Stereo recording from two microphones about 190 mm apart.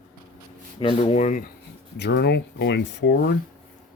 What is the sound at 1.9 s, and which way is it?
Speech, 60° left (ahead or behind).